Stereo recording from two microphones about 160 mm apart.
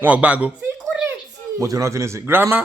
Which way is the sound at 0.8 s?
5° right (ahead or behind).